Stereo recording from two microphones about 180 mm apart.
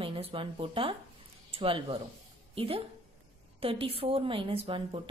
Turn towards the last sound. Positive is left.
turn(degrees=-30)  # may be behind; listen again after turning